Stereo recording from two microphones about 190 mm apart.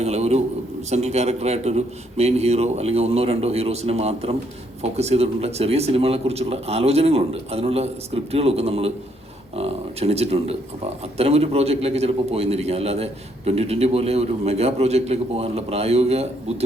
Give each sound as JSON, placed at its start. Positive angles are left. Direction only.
{"t": 0.0, "sound": "a man's voice", "side_deg": -35}